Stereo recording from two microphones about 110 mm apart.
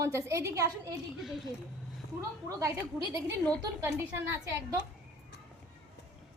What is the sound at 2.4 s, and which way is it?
Speech, 30° right (ahead or behind).